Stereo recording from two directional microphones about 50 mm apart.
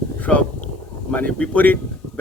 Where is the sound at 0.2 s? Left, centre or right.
Left.